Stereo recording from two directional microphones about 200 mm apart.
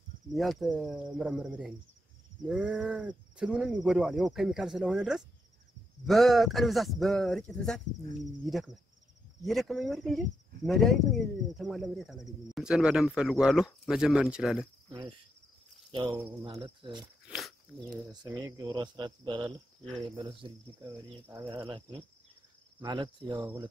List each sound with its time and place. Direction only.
0.3 s speech: centre (ahead or behind)
14.9 s insect: 25° right (ahead or behind)
16.1 s speech: 10° right (ahead or behind)
16.4 s speech: 25° right (ahead or behind)
17.3 s a sound: centre (ahead or behind)
18.0 s speech: 15° right (ahead or behind)
20.8 s speech: 15° right (ahead or behind)
22.8 s speech: 20° right (ahead or behind)
23.3 s speech: 10° right (ahead or behind)